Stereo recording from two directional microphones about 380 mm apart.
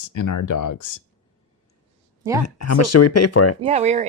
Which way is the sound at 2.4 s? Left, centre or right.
Left.